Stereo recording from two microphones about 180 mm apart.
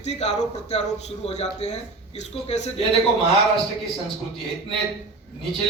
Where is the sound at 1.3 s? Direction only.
40° left (ahead or behind).